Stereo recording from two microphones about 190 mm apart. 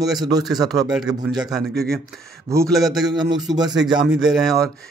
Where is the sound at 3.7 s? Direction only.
5° right (ahead or behind).